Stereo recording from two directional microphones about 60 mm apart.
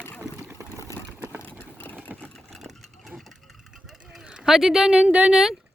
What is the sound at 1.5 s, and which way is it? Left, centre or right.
Vehicle, left.